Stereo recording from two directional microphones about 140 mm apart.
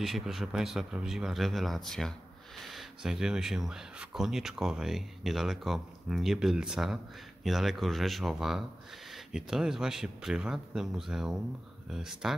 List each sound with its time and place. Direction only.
0.0 s speech: centre (ahead or behind)